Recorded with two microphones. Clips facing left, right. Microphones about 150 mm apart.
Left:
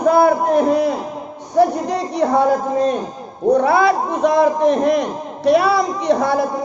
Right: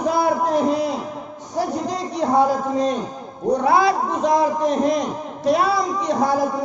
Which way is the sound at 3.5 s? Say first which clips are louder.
Left 2 dB; 60° left (ahead or behind).